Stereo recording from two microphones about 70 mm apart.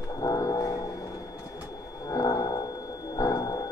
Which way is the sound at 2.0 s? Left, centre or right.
Left.